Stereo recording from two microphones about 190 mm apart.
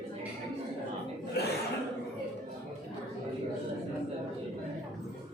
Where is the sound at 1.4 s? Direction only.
60° left (ahead or behind).